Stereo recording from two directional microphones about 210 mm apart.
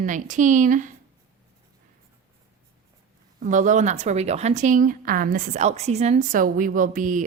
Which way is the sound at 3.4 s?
35° right (ahead or behind).